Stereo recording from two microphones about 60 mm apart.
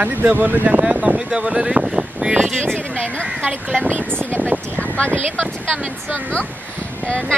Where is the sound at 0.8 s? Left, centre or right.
Centre.